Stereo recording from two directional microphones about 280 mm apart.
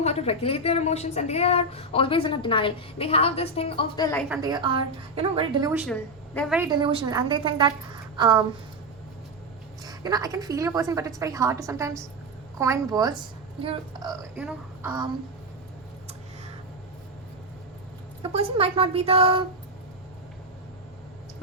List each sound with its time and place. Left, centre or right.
0.0 s a woman's voice: left
4.3 s a woman's voice: centre
5.8 s a woman's voice: centre
6.6 s a woman's voice: centre
9.8 s a woman's voice: centre
18.2 s a woman's voice: right